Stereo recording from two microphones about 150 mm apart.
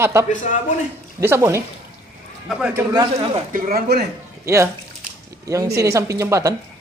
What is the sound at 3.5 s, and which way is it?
Speech, 80° right.